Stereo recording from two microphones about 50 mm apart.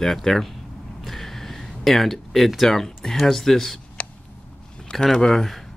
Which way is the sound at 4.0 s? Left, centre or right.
Left.